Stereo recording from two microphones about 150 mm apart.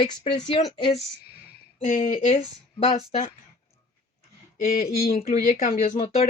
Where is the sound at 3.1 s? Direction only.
45° left (ahead or behind).